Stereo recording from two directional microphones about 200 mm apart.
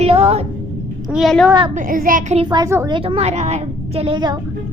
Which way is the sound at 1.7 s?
40° right (ahead or behind).